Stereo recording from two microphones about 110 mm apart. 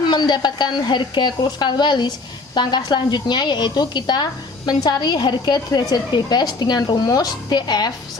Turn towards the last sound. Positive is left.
turn(degrees=40)  # may be behind; listen again after turning